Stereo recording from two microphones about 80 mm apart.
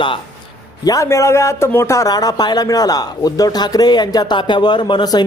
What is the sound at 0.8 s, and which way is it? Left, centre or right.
A man's voice, left.